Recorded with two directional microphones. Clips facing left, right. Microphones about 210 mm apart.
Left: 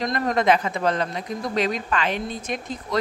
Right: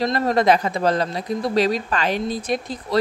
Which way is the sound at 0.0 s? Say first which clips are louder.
Right 3 dB; 30° right (ahead or behind).